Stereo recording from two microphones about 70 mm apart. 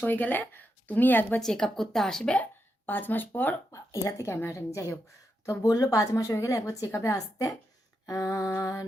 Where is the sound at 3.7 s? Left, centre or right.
Left.